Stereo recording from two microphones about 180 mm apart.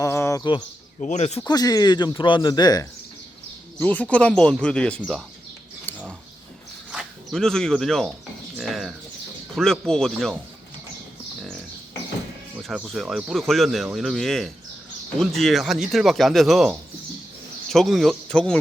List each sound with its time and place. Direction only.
0.0 s a sound: 15° left (ahead or behind)
1.0 s speech: 40° left (ahead or behind)
1.5 s speech: 20° left (ahead or behind)
3.8 s speech: 10° left (ahead or behind)
5.9 s a sound: 10° left (ahead or behind)
6.9 s speech: centre (ahead or behind)
8.5 s bird: centre (ahead or behind)
9.6 s speech: 5° left (ahead or behind)
12.6 s speech: centre (ahead or behind)